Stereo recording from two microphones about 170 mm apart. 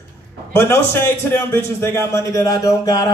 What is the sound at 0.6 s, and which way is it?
A man's voice, 15° left (ahead or behind).